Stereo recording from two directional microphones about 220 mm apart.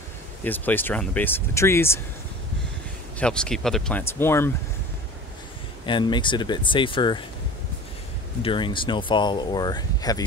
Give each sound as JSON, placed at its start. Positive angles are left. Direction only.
{"t": 0.4, "sound": "speech", "side_deg": 10}
{"t": 3.2, "sound": "speech", "side_deg": 5}
{"t": 5.9, "sound": "speech", "side_deg": 20}
{"t": 8.4, "sound": "speech", "side_deg": 20}